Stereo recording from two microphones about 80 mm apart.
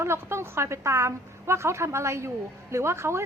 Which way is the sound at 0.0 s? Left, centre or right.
Right.